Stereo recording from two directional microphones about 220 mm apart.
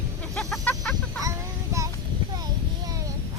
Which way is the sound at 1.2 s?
15° right (ahead or behind).